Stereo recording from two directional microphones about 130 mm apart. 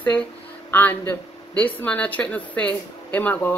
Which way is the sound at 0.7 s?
15° left (ahead or behind).